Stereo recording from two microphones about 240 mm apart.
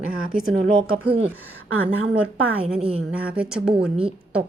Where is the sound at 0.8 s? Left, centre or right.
Right.